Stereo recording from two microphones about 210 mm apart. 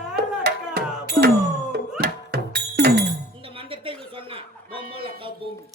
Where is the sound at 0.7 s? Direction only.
45° right (ahead or behind).